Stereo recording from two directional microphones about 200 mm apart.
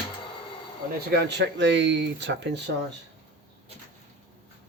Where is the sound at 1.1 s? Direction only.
60° right (ahead or behind).